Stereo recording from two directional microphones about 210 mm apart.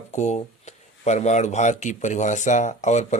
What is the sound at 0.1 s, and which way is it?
Speech, 35° left (ahead or behind).